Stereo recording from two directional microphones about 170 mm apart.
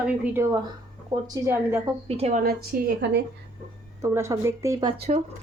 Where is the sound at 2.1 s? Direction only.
40° right (ahead or behind).